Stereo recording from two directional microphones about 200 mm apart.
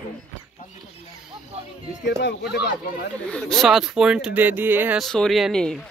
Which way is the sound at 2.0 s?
60° left (ahead or behind).